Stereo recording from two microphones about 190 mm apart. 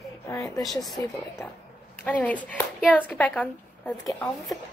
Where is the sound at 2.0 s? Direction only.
10° left (ahead or behind).